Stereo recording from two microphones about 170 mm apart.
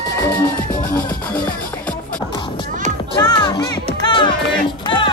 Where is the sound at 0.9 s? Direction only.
10° left (ahead or behind).